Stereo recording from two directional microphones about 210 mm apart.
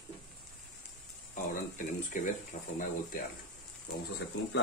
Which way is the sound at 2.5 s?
45° left (ahead or behind).